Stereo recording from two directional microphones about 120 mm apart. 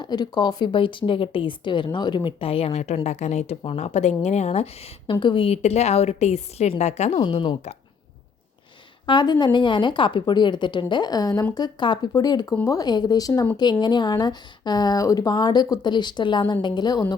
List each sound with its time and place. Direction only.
0.0 s a woman's voice: 35° left (ahead or behind); by 5.1 s 55° left (ahead or behind)
5.2 s a woman's voice: 45° left (ahead or behind)
5.6 s a woman's voice: 65° left (ahead or behind)
9.0 s speech: 40° left (ahead or behind)